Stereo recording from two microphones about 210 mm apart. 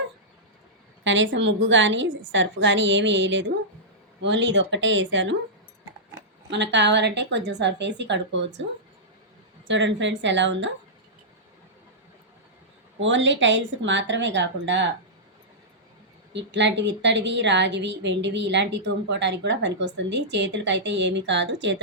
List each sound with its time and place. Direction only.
1.0 s speech: 60° right (ahead or behind)
6.5 s speech: 55° right (ahead or behind)
9.6 s speech: 60° right (ahead or behind)
13.0 s speech: 60° right (ahead or behind)
16.3 s speech: 55° right (ahead or behind)